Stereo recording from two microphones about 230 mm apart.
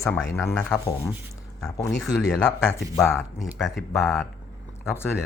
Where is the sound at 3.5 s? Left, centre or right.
Centre.